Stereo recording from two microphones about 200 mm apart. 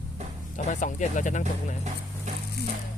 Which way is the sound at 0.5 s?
40° left (ahead or behind).